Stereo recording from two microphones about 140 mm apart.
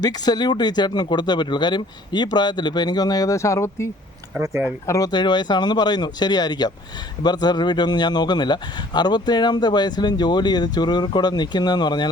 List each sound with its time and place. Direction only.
0.0 s speech: 30° left (ahead or behind)
4.4 s speech: 15° right (ahead or behind)
4.9 s speech: 25° left (ahead or behind)